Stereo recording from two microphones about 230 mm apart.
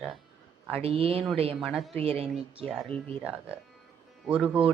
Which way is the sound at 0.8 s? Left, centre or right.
Right.